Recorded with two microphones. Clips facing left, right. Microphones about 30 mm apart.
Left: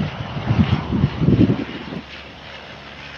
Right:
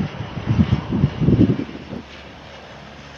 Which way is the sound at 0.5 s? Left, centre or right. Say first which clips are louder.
Even; left.